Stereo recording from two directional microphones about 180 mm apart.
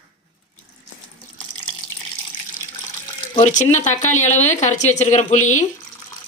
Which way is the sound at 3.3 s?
40° left (ahead or behind).